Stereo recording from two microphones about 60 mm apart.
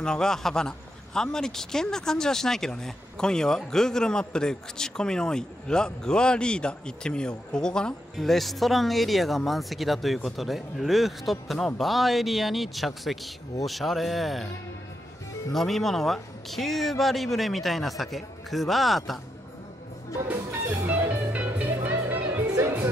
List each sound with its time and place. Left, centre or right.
0.0 s a man's voice: centre
15.5 s a man's voice: centre
21.1 s music: right